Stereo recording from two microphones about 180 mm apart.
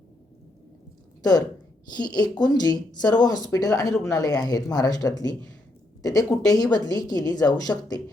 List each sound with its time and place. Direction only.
1.2 s speech: 20° left (ahead or behind)